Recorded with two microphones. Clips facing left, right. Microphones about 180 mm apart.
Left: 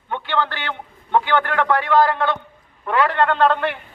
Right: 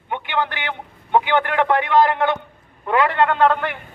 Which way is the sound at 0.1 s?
15° right (ahead or behind).